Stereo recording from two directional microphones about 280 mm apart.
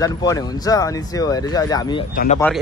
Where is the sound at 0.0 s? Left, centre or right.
Centre.